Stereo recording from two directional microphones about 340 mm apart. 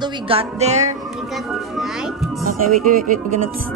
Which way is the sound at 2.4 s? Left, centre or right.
Right.